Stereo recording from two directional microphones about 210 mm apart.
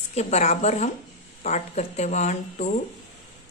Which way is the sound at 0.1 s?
30° left (ahead or behind).